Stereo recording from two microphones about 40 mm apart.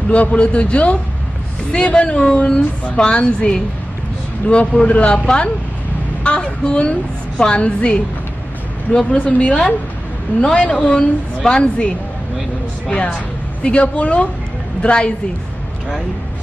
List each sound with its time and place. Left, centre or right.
0.1 s a man's voice: left
9.1 s a man's voice: left
12.9 s a woman's voice: left